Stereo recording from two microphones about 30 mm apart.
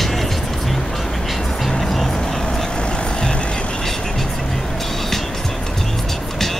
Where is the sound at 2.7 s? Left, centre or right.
Left.